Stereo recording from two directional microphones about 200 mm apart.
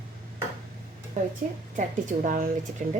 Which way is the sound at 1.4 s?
40° right (ahead or behind).